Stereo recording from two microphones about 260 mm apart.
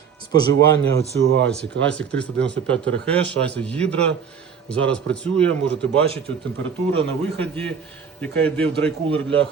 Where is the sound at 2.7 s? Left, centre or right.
Centre.